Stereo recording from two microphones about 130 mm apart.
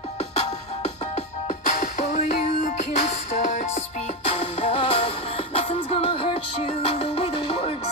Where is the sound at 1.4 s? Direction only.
65° left (ahead or behind).